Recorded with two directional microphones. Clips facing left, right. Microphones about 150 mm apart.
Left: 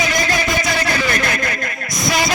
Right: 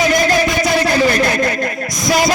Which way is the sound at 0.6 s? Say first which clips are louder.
Right 6 dB; 35° right (ahead or behind).